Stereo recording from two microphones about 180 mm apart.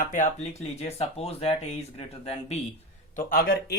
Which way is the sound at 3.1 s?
50° left (ahead or behind).